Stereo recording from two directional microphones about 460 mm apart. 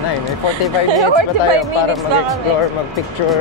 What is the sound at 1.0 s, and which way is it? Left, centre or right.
Speech, right.